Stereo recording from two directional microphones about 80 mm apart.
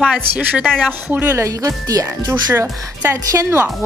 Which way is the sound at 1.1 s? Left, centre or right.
Right.